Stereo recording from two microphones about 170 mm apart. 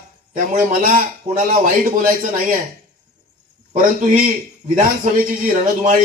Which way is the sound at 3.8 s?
55° right (ahead or behind).